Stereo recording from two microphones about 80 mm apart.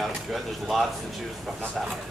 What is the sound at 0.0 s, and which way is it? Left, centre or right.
Speech, centre.